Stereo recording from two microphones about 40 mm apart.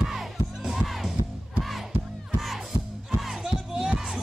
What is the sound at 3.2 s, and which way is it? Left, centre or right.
Music, centre.